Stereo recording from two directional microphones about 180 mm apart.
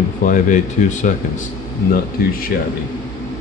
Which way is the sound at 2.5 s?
60° left (ahead or behind).